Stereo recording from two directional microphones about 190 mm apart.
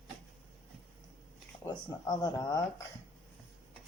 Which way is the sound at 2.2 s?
20° left (ahead or behind).